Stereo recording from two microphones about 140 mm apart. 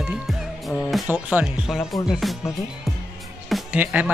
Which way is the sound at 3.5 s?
5° right (ahead or behind).